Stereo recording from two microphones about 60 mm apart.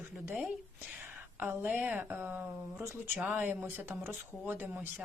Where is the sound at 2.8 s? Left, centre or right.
Right.